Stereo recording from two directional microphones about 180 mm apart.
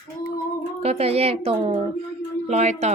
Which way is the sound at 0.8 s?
35° right (ahead or behind).